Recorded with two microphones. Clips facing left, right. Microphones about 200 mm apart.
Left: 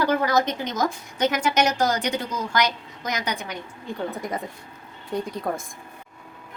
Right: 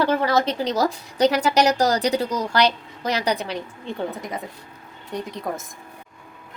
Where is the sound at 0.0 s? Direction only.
25° right (ahead or behind).